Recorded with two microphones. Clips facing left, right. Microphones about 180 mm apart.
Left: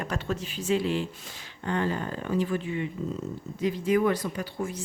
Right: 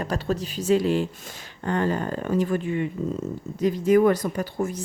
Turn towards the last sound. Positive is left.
turn(degrees=-45)  # may be behind; listen again after turning